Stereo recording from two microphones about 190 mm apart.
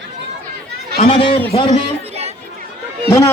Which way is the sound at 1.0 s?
30° left (ahead or behind).